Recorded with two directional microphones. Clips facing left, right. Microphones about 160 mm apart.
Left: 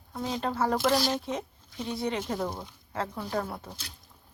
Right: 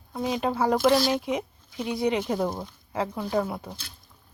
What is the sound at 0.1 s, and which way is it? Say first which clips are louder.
Speech: right 5 dB; 15° right (ahead or behind).